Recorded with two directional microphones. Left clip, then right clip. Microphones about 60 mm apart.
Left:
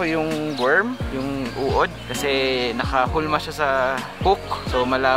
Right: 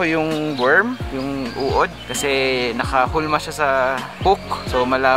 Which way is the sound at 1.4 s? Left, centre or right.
Centre.